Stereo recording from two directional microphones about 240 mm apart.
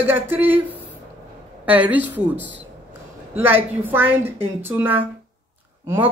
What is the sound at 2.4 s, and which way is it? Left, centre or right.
Speech, right.